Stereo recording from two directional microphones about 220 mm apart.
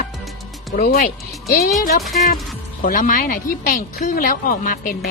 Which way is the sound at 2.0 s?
Centre (ahead or behind).